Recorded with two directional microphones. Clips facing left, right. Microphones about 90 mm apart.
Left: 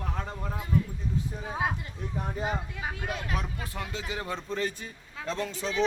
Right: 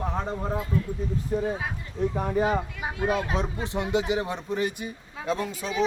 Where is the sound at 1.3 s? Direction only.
75° right (ahead or behind).